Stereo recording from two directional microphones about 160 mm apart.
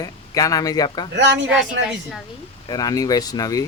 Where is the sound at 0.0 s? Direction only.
20° left (ahead or behind).